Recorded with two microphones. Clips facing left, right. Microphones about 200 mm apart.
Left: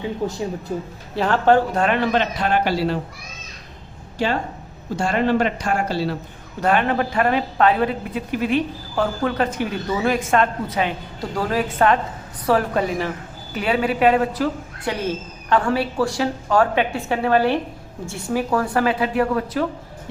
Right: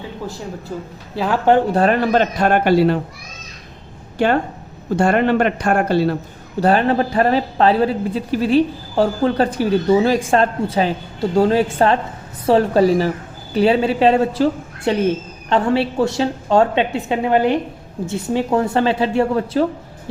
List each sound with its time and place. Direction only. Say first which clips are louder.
0.7 s speech: right 1 dB; 20° left (ahead or behind)
1.1 s speech: right 1 dB; centre (ahead or behind)
1.7 s a man's voice: right 4 dB; 40° right (ahead or behind); by 3.0 s 55° right (ahead or behind)
4.9 s speech: right 4 dB; 55° right (ahead or behind)
6.6 s a woman's voice: right 4 dB; 35° right (ahead or behind)